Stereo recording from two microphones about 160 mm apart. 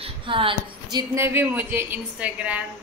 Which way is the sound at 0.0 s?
35° right (ahead or behind).